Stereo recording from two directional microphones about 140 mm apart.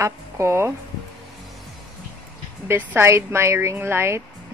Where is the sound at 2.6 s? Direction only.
15° right (ahead or behind).